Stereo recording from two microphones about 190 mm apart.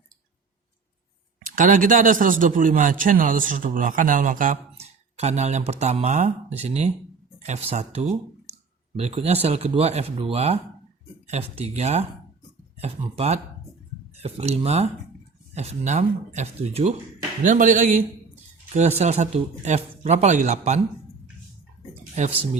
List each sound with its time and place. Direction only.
1.5 s a man's voice: 45° right (ahead or behind)
22.1 s speech: 35° right (ahead or behind)